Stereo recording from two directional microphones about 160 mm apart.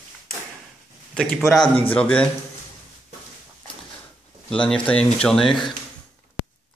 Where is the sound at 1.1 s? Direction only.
5° left (ahead or behind).